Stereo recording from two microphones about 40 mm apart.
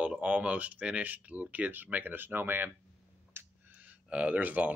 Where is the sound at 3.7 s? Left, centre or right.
Right.